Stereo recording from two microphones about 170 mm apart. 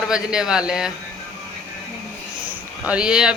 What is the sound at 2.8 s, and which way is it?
Speech, 5° right (ahead or behind).